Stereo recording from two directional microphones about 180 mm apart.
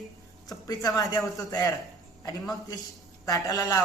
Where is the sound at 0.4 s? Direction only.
20° left (ahead or behind).